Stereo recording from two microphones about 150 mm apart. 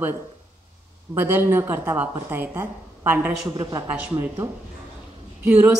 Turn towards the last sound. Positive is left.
turn(degrees=-15)  # may be behind; listen again after turning